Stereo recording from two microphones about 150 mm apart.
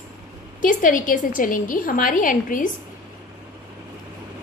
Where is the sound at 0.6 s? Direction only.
60° left (ahead or behind).